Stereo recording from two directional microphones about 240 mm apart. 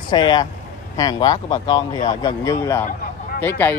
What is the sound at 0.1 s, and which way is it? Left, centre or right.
Speech, centre.